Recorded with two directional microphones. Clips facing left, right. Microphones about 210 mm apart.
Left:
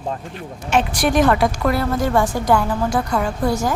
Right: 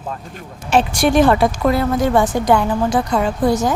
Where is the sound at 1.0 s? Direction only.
30° right (ahead or behind).